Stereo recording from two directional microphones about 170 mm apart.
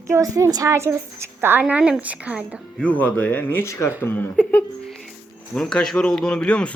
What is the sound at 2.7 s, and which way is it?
Speech, 10° left (ahead or behind).